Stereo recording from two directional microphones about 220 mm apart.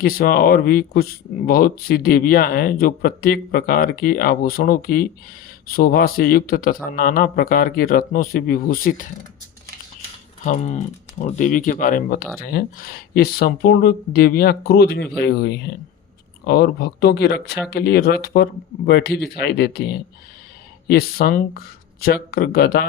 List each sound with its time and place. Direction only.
0.0 s speech: 40° left (ahead or behind)
10.4 s speech: 30° left (ahead or behind)